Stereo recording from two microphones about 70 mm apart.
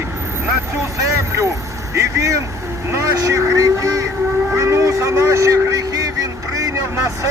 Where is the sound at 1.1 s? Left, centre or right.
Right.